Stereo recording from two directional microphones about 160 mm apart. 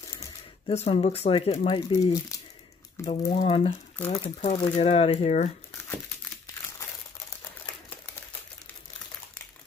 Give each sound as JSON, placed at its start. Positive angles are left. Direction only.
{"t": 0.7, "sound": "speech", "side_deg": 40}